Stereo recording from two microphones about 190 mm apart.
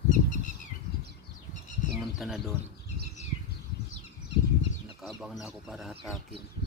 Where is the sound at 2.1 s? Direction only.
Centre (ahead or behind).